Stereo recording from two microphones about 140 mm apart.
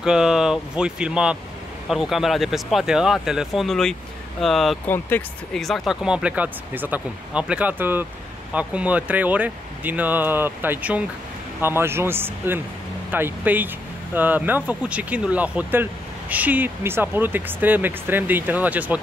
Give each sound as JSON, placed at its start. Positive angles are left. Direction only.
{"t": 0.0, "sound": "speech", "side_deg": -5}
{"t": 4.8, "sound": "speech", "side_deg": 15}
{"t": 5.5, "sound": "speech", "side_deg": 0}